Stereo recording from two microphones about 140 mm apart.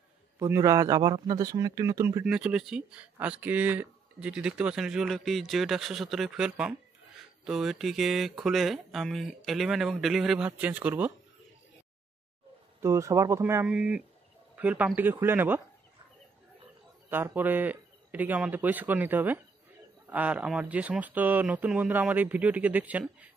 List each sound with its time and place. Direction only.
0.4 s speech: 25° right (ahead or behind)
2.2 s speech: 5° right (ahead or behind)
12.8 s speech: 20° right (ahead or behind)
13.7 s speech: 5° right (ahead or behind)
17.1 s speech: 15° right (ahead or behind)